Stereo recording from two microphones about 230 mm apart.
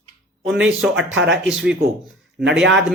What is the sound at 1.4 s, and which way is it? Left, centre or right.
Speech, centre.